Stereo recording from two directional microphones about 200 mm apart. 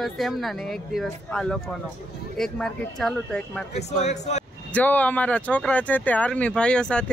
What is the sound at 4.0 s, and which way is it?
Speech, 35° left (ahead or behind).